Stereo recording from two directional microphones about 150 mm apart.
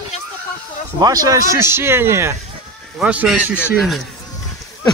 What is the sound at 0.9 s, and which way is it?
Speech, 25° right (ahead or behind).